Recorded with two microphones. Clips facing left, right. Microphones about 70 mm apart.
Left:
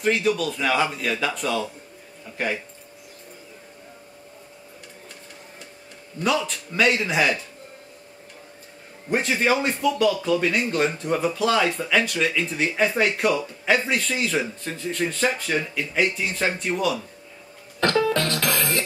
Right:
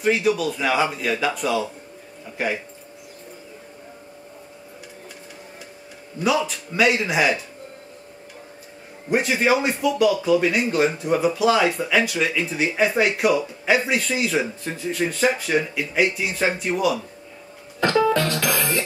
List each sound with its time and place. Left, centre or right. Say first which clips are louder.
0.0 s a man's voice: right 2 dB; centre
6.1 s speech: right 2 dB; centre
9.1 s speech: right 2 dB; centre